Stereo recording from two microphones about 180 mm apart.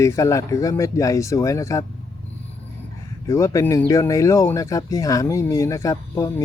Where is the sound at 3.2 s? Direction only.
20° left (ahead or behind).